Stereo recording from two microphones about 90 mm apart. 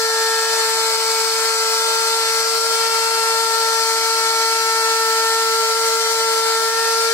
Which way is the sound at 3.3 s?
30° left (ahead or behind).